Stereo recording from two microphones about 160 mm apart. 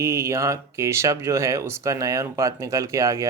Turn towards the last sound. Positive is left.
turn(degrees=-20)  # may be behind; listen again after turning